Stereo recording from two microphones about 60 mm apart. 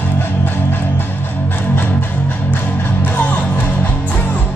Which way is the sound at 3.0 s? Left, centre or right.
Left.